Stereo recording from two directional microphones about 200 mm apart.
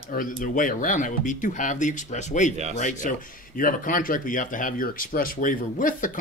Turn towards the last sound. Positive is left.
turn(degrees=40)  # may be behind; listen again after turning